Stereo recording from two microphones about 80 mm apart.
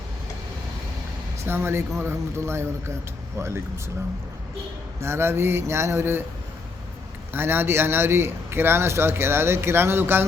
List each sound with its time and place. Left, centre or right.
1.5 s a man's voice: right
4.9 s a man's voice: right
7.3 s a man's voice: right